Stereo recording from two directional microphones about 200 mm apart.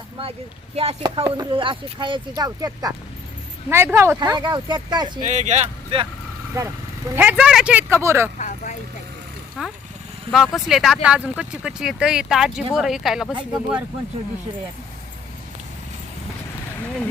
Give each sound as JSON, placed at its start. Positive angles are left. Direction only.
{"t": 0.8, "sound": "speech", "side_deg": -30}
{"t": 5.2, "sound": "speech", "side_deg": -35}
{"t": 6.5, "sound": "speech", "side_deg": -15}
{"t": 8.4, "sound": "speech", "side_deg": 40}
{"t": 9.6, "sound": "speech", "side_deg": -5}